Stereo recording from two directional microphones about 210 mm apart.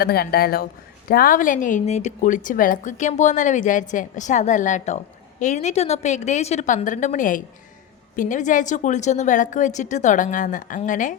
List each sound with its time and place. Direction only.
0.0 s a woman's voice: 45° left (ahead or behind)